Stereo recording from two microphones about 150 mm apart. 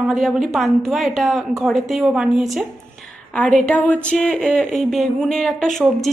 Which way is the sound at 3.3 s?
10° left (ahead or behind).